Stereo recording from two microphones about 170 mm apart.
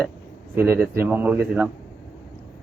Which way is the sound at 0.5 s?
15° right (ahead or behind).